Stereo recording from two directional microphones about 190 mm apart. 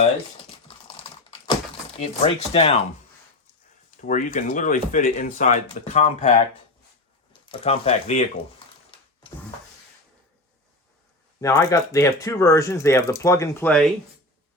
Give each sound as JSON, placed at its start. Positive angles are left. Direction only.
{"t": 2.0, "sound": "speech", "side_deg": 30}
{"t": 4.0, "sound": "speech", "side_deg": 40}
{"t": 7.4, "sound": "a sound", "side_deg": 30}
{"t": 11.3, "sound": "speech", "side_deg": 15}